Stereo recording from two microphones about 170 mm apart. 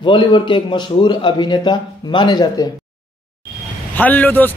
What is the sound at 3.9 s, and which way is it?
Speech, 10° left (ahead or behind).